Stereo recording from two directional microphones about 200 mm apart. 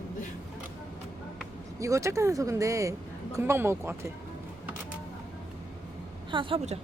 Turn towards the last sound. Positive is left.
turn(degrees=-25)  # may be behind; listen again after turning